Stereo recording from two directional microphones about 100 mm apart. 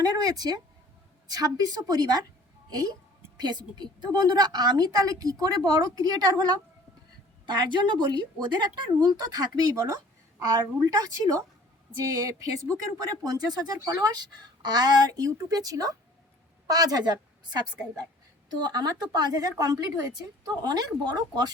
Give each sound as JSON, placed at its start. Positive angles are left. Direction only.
{"t": 0.0, "sound": "a woman's voice", "side_deg": -40}